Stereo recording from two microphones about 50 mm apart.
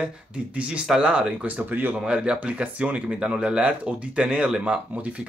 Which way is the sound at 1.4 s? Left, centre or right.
Right.